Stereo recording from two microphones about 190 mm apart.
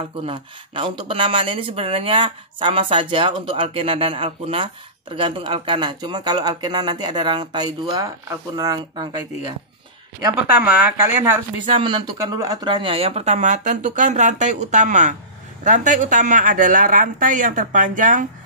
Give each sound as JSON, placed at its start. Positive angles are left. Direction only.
{"t": 0.2, "sound": "speech", "side_deg": -25}
{"t": 10.3, "sound": "speech", "side_deg": -5}
{"t": 11.6, "sound": "speech", "side_deg": -25}